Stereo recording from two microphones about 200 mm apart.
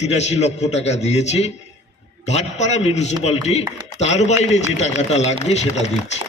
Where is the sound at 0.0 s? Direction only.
35° left (ahead or behind).